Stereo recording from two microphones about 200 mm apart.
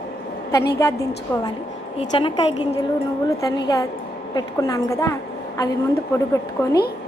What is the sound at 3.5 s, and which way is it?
A woman's voice, 20° left (ahead or behind).